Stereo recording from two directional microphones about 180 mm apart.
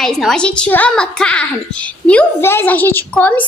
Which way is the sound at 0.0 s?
Centre (ahead or behind).